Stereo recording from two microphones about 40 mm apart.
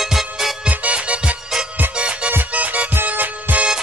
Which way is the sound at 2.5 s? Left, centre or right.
Right.